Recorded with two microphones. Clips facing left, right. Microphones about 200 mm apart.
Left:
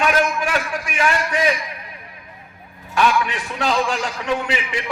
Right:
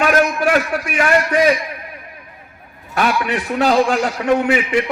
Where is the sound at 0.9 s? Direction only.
45° right (ahead or behind).